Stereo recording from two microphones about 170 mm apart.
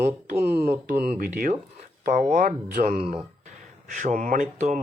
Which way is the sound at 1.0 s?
55° right (ahead or behind).